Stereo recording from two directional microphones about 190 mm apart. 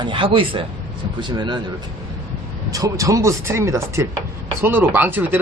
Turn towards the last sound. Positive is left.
turn(degrees=-10)  # may be behind; listen again after turning